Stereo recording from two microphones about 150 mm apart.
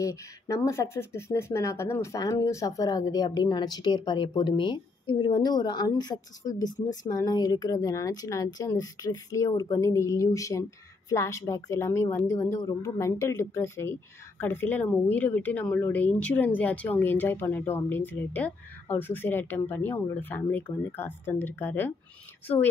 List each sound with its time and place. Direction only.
0.0 s speech: 20° left (ahead or behind)